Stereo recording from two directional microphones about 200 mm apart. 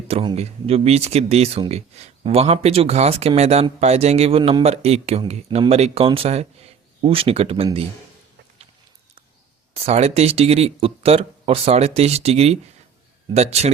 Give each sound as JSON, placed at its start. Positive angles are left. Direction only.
{"t": 0.1, "sound": "speech", "side_deg": -30}
{"t": 9.7, "sound": "speech", "side_deg": -30}